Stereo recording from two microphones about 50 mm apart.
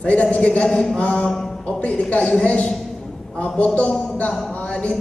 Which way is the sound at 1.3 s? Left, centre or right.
Centre.